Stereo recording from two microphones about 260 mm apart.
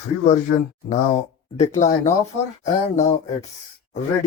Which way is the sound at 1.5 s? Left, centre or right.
Left.